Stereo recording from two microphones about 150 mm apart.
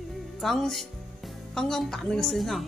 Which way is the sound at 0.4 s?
Centre (ahead or behind).